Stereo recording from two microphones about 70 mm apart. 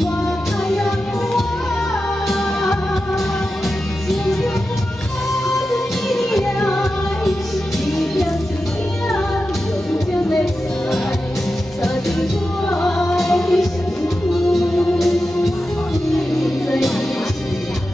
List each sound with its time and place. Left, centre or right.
0.7 s music: centre
4.1 s music: centre
5.7 s music: centre
11.8 s music: centre